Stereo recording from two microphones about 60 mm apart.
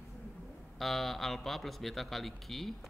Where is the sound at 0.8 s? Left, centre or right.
Centre.